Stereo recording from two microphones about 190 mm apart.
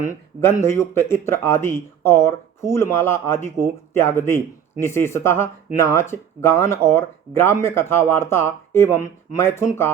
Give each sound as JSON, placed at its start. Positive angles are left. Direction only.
{"t": 0.0, "sound": "speech", "side_deg": 15}